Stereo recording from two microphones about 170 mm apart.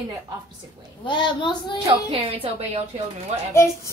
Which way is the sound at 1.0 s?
30° left (ahead or behind).